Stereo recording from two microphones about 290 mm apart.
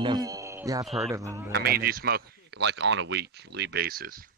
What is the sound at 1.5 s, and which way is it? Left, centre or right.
Speech, right.